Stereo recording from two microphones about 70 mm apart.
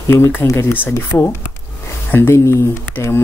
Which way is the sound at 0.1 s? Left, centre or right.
Left.